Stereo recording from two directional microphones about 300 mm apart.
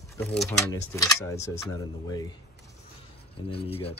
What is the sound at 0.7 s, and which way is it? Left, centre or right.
Speech, centre.